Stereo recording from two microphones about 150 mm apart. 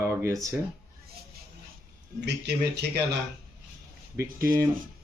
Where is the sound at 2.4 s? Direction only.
90° right.